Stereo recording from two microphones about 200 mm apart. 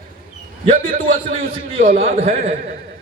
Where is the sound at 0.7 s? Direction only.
40° right (ahead or behind).